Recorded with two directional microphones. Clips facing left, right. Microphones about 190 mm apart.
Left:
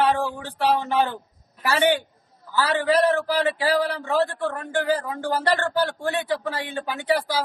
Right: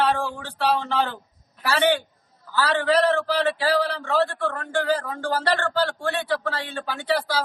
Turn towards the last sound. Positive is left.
turn(degrees=15)  # may be behind; listen again after turning